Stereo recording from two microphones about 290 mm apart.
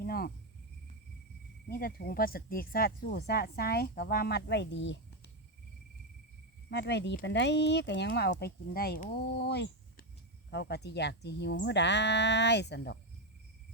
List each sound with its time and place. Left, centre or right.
0.0 s cricket: left
1.6 s speech: left
6.7 s speech: left